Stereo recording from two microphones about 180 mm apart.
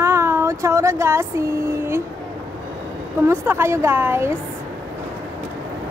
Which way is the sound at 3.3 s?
15° right (ahead or behind).